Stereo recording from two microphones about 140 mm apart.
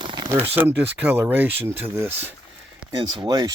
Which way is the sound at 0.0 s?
35° right (ahead or behind).